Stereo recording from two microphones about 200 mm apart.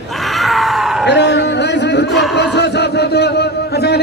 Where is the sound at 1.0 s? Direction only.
60° left (ahead or behind).